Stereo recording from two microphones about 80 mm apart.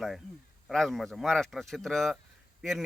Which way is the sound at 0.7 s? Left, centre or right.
Centre.